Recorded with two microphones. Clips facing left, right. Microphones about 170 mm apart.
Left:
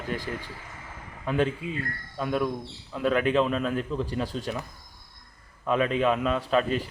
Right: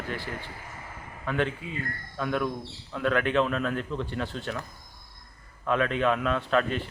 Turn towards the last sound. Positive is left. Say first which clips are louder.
# left 1 dB
turn(degrees=5)  # may be behind; listen again after turning